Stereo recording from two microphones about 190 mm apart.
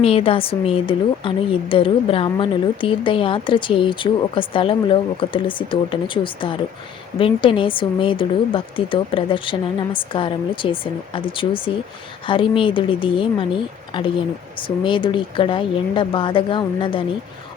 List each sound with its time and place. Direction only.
0.0 s a woman's voice: 30° left (ahead or behind)